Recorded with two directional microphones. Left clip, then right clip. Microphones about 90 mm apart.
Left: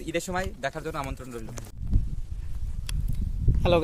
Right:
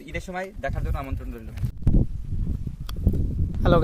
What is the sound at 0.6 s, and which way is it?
Speech, 35° left (ahead or behind).